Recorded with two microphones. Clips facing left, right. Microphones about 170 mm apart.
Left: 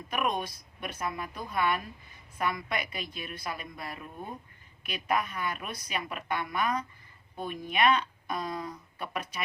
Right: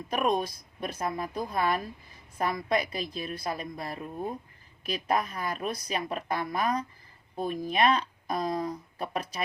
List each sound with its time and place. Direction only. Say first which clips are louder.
0.1 s a woman's voice: right 4 dB; 35° right (ahead or behind)